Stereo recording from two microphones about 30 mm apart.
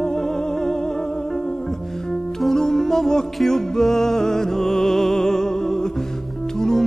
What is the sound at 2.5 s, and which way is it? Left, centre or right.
Music, centre.